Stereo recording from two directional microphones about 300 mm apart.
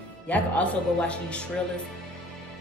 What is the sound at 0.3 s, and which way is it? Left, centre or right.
Speech, centre.